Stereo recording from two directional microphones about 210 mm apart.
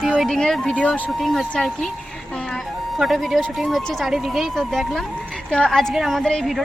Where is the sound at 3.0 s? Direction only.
Centre (ahead or behind).